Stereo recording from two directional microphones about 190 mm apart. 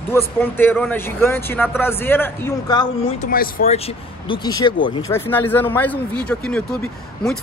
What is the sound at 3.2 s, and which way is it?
Speech, 50° left (ahead or behind).